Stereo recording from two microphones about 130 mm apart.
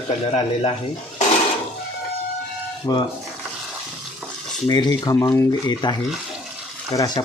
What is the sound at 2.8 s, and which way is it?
Speech, 35° left (ahead or behind).